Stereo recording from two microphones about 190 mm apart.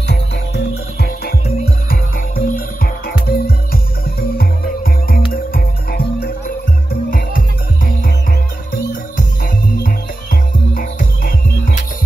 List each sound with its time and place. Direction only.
0.9 s music: 55° left (ahead or behind)
9.8 s music: 45° left (ahead or behind)